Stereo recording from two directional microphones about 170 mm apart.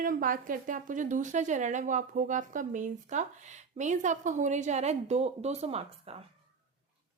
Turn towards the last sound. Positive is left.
turn(degrees=-35)  # may be behind; listen again after turning